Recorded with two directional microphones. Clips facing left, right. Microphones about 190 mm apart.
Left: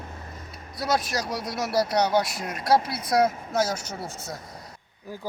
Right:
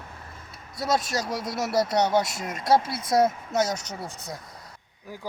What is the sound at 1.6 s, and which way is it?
Speech, 25° right (ahead or behind).